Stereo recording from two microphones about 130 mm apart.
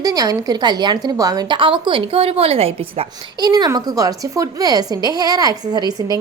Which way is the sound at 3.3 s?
30° right (ahead or behind).